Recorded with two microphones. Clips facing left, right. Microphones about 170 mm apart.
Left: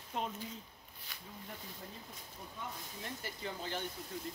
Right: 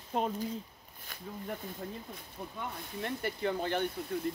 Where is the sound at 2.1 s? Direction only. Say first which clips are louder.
Right 7 dB; 60° right (ahead or behind).